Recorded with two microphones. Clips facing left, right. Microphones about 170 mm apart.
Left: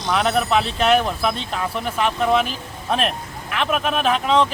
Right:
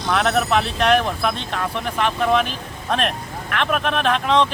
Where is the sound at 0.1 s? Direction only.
5° left (ahead or behind).